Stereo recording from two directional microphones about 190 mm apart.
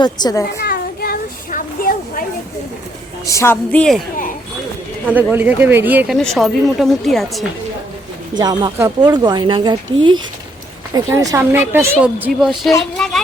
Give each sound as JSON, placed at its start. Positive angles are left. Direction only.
{"t": 0.0, "sound": "a woman's voice", "side_deg": 20}
{"t": 0.6, "sound": "a sound", "side_deg": 50}
{"t": 3.2, "sound": "a woman's voice", "side_deg": 15}
{"t": 5.0, "sound": "speech", "side_deg": -10}
{"t": 6.1, "sound": "speech", "side_deg": 0}
{"t": 8.4, "sound": "speech", "side_deg": -20}
{"t": 10.9, "sound": "speech", "side_deg": -20}